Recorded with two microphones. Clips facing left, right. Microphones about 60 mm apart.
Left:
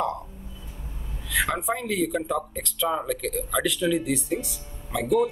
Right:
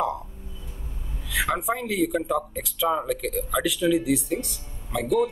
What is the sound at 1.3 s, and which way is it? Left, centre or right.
Speech, centre.